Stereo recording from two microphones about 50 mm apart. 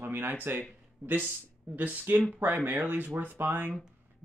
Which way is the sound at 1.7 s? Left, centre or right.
Right.